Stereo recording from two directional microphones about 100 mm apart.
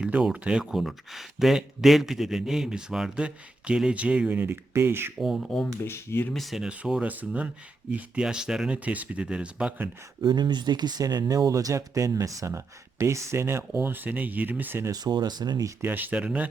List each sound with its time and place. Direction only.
0.0 s speech: 5° right (ahead or behind); by 5.1 s 25° right (ahead or behind)
5.2 s speech: centre (ahead or behind)
5.8 s speech: 25° left (ahead or behind)
6.3 s speech: centre (ahead or behind)
10.2 s speech: 45° right (ahead or behind); by 14.8 s 20° right (ahead or behind)
14.8 s speech: 40° right (ahead or behind)
15.8 s speech: 20° right (ahead or behind)